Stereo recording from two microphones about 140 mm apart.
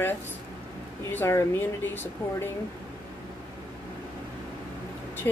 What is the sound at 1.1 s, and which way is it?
Speech, 20° left (ahead or behind).